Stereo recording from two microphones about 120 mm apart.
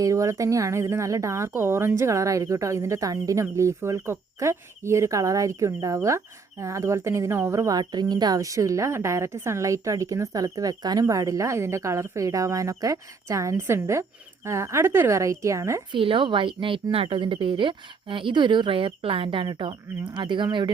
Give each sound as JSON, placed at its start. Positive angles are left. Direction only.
{"t": 0.0, "sound": "speech", "side_deg": -25}
{"t": 15.9, "sound": "a woman's voice", "side_deg": -45}